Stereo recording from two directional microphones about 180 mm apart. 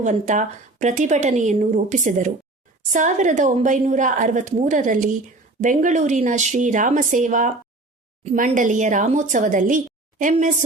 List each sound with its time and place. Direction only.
0.0 s speech: 45° right (ahead or behind)